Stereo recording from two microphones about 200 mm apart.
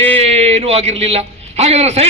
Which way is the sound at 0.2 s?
30° right (ahead or behind).